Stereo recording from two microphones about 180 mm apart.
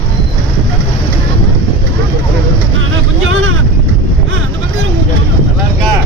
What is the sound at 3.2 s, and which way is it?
Vehicle, 90° right.